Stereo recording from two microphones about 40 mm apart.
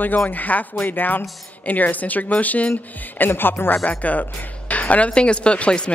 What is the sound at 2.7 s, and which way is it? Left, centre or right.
Speech, left.